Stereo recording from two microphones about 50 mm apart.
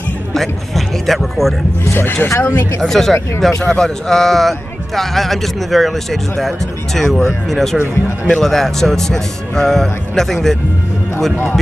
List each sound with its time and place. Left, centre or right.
0.3 s speech: centre
2.0 s speech: left
2.8 s speech: centre